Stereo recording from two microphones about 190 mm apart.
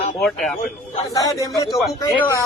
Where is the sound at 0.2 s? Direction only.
Centre (ahead or behind).